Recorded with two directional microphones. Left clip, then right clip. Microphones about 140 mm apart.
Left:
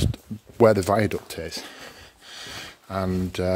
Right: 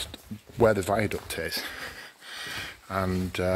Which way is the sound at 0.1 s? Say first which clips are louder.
Left 3 dB; 80° left.